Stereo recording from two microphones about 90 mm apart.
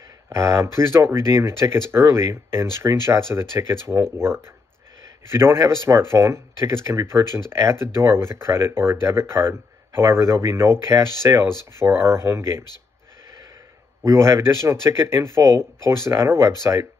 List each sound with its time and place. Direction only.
0.3 s speech: 35° right (ahead or behind)
14.0 s speech: 30° right (ahead or behind)